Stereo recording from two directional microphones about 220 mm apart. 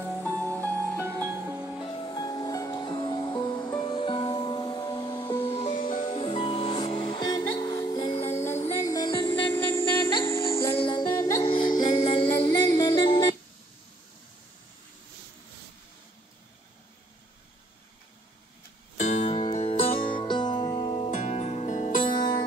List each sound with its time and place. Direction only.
0.0 s music: 5° right (ahead or behind)
1.0 s music: 10° right (ahead or behind)
1.8 s music: 20° left (ahead or behind)
9.5 s music: 10° left (ahead or behind)
12.4 s music: 15° left (ahead or behind)
18.9 s music: 30° left (ahead or behind)
22.0 s music: 20° left (ahead or behind)